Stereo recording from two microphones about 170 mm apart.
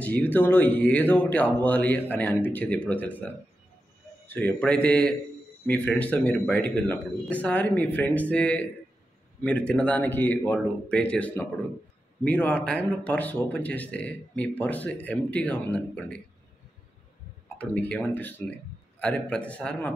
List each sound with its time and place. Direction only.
0.0 s speech: 10° left (ahead or behind)
4.3 s speech: 10° left (ahead or behind)
17.6 s speech: 10° left (ahead or behind)